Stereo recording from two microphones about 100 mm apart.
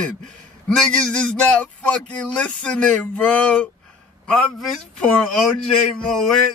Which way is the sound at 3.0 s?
15° left (ahead or behind).